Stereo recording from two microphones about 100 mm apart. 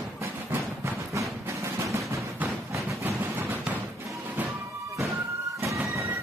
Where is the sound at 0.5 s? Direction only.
30° right (ahead or behind).